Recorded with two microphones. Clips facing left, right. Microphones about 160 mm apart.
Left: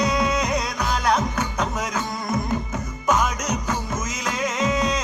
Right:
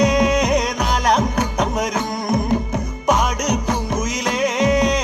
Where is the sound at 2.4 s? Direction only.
65° right (ahead or behind).